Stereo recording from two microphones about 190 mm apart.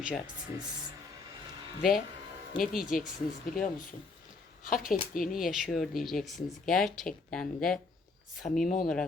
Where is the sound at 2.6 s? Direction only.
45° left (ahead or behind).